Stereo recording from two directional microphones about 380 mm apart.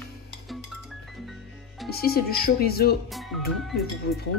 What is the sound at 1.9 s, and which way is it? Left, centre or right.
Speech, left.